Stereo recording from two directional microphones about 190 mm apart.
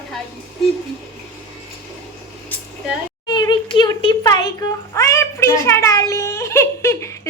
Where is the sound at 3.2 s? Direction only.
20° left (ahead or behind).